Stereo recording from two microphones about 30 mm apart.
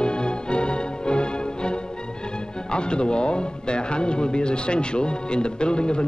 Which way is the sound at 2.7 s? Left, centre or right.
Left.